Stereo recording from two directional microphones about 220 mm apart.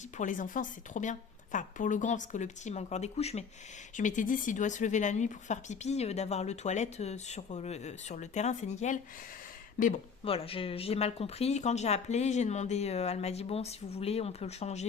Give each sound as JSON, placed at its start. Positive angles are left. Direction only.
{"t": 0.2, "sound": "speech", "side_deg": 35}
{"t": 10.2, "sound": "speech", "side_deg": 25}